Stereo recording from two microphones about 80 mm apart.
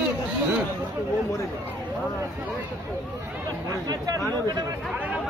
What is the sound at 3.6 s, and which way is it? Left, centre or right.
Speech, right.